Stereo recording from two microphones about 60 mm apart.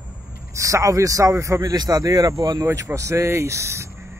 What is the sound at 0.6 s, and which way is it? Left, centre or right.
Speech, right.